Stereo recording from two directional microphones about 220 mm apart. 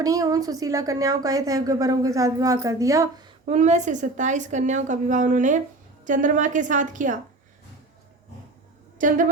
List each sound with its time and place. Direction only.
0.0 s a woman's voice: 15° right (ahead or behind)
3.4 s a woman's voice: 30° right (ahead or behind)
9.0 s a woman's voice: 35° right (ahead or behind)